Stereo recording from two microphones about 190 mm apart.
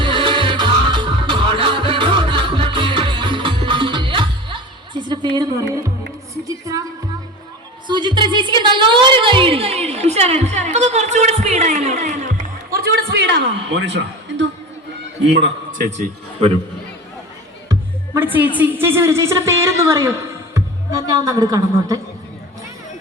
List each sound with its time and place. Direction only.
0.0 s music: 25° right (ahead or behind)
7.9 s a woman's voice: 25° right (ahead or behind)
12.7 s a woman's voice: 55° right (ahead or behind)
15.8 s a woman's voice: 40° right (ahead or behind)
17.7 s music: 15° right (ahead or behind)
18.5 s a woman's voice: 10° right (ahead or behind)